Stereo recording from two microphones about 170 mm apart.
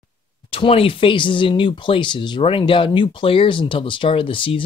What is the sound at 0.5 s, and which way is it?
Speech, 35° left (ahead or behind).